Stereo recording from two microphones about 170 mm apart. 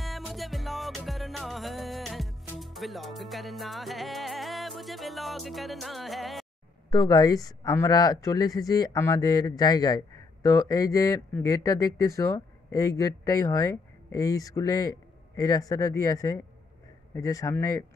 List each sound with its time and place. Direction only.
0.0 s music: centre (ahead or behind)
6.9 s speech: 25° left (ahead or behind)